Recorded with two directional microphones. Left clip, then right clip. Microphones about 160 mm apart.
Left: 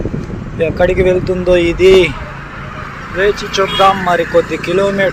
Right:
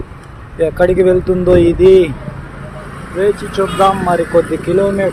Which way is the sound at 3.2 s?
20° right (ahead or behind).